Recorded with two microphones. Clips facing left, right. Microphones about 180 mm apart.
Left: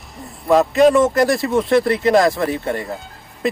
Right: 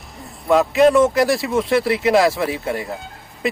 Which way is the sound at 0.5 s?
Centre (ahead or behind).